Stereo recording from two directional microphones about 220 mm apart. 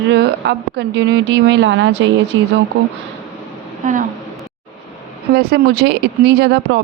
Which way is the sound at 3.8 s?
35° right (ahead or behind).